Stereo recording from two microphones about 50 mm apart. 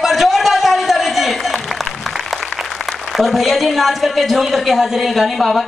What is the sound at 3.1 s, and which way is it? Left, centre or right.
A man's voice, centre.